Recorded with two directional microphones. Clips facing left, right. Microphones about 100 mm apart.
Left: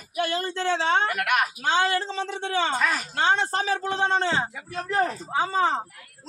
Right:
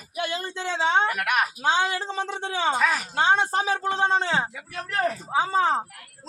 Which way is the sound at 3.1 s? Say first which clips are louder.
Right 2 dB; 10° right (ahead or behind).